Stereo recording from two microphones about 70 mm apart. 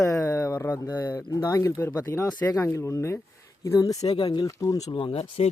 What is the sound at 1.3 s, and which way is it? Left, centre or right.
Speech, left.